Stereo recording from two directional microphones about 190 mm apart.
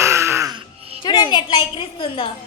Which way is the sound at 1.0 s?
25° left (ahead or behind).